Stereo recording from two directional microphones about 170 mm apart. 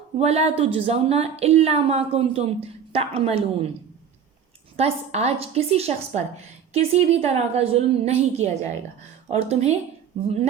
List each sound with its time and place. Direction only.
0.2 s a woman's voice: 40° right (ahead or behind)
4.8 s a woman's voice: 40° right (ahead or behind)